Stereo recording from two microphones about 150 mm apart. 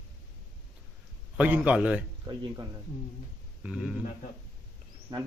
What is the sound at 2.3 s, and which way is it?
Speech, 30° right (ahead or behind).